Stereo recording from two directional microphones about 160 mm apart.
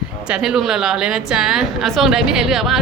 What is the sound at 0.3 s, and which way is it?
A woman's voice, 5° right (ahead or behind).